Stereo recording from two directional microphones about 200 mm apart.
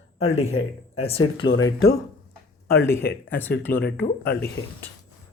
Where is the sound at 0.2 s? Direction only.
30° left (ahead or behind).